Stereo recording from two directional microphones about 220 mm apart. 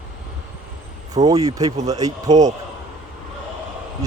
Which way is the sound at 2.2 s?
30° right (ahead or behind).